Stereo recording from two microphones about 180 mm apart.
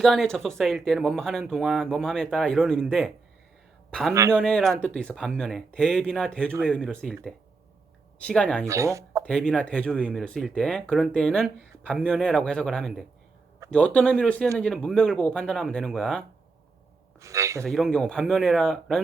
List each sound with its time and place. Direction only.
0.0 s speech: centre (ahead or behind)
4.1 s speech: 15° right (ahead or behind)
4.4 s speech: 5° left (ahead or behind)
8.2 s speech: 5° left (ahead or behind)
8.6 s speech: 15° right (ahead or behind)
9.2 s speech: 5° left (ahead or behind)
17.2 s speech: 15° right (ahead or behind)
17.6 s speech: centre (ahead or behind)